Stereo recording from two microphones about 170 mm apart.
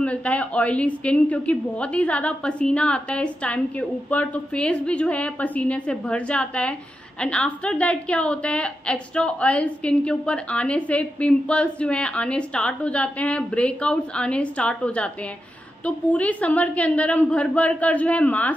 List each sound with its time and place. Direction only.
0.0 s a woman's voice: 5° left (ahead or behind)